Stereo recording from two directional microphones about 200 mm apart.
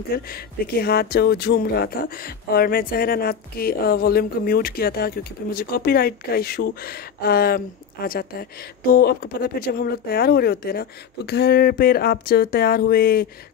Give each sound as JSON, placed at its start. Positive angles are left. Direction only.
{"t": 0.1, "sound": "speech", "side_deg": 50}